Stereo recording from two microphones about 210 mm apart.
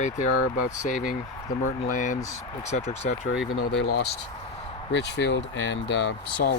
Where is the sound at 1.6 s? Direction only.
35° left (ahead or behind).